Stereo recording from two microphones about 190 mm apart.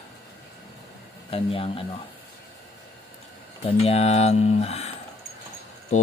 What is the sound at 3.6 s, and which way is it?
Speech, 35° left (ahead or behind).